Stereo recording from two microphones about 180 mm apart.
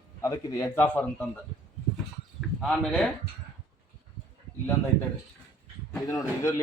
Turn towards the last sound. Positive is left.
turn(degrees=15)  # may be behind; listen again after turning